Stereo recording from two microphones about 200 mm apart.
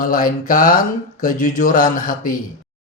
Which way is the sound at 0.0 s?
45° left (ahead or behind).